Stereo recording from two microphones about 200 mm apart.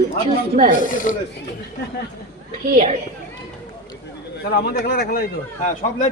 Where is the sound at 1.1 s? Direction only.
40° left (ahead or behind).